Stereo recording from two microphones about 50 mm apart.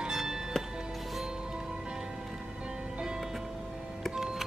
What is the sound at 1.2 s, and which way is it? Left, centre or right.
Music, centre.